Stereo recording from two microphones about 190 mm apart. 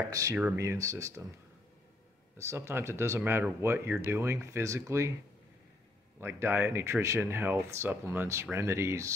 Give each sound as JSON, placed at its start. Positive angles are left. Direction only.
{"t": 0.1, "sound": "speech", "side_deg": -15}
{"t": 2.3, "sound": "speech", "side_deg": -15}
{"t": 6.2, "sound": "speech", "side_deg": -10}